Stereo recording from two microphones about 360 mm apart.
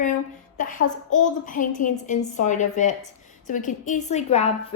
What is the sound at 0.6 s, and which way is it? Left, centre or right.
A woman's voice, left.